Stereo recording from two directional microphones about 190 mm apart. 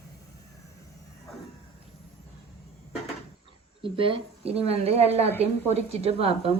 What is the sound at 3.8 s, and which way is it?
A woman's voice, 30° right (ahead or behind).